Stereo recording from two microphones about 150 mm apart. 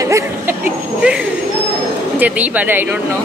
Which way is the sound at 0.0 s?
20° right (ahead or behind).